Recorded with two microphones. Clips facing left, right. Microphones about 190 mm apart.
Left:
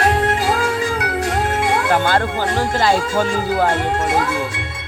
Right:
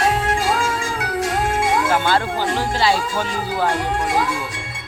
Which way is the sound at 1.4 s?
65° left (ahead or behind).